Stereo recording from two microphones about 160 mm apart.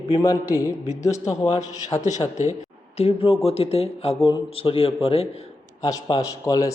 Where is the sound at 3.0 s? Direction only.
40° left (ahead or behind).